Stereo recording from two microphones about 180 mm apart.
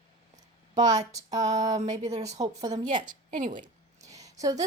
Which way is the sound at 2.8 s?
45° right (ahead or behind).